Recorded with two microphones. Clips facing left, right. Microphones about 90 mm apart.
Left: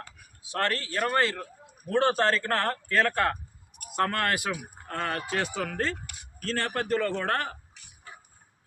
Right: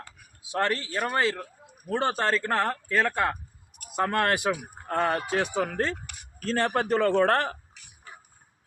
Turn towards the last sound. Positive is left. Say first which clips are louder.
# right 7 dB
turn(degrees=-30)  # may be behind; listen again after turning